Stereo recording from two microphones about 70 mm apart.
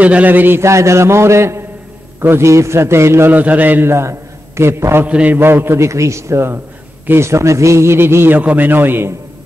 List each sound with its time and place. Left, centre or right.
0.0 s a man's voice: right
0.6 s a sound: right
2.1 s a man's voice: right
3.3 s a man's voice: right
5.0 s a man's voice: right
8.4 s a man's voice: right